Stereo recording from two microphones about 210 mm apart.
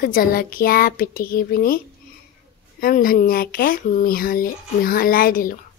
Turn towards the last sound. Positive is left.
turn(degrees=45)  # may be behind; listen again after turning